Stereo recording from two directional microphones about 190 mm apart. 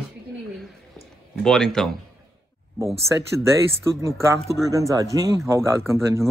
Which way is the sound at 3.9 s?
15° right (ahead or behind).